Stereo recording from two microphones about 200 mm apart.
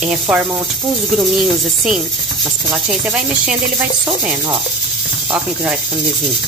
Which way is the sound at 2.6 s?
5° right (ahead or behind).